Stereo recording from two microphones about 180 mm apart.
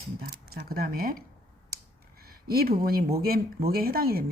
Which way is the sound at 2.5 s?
55° right (ahead or behind).